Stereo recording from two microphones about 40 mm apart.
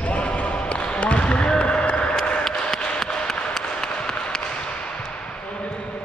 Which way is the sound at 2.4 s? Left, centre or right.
Centre.